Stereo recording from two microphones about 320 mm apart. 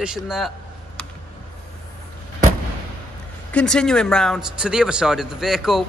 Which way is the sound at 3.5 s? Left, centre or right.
Centre.